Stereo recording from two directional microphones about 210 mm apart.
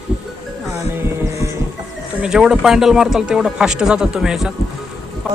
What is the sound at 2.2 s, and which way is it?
Speech, 5° right (ahead or behind).